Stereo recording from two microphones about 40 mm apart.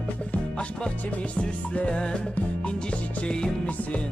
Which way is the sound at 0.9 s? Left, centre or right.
Left.